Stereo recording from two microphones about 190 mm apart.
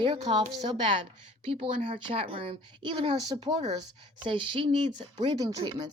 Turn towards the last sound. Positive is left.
turn(degrees=-20)  # may be behind; listen again after turning